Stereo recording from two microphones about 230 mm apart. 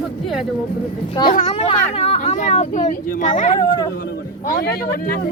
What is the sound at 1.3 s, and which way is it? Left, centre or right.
Speech, left.